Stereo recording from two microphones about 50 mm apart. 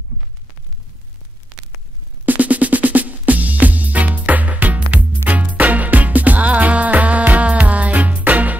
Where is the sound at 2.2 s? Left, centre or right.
Right.